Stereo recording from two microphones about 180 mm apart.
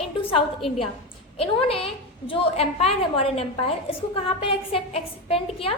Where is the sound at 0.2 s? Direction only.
30° left (ahead or behind).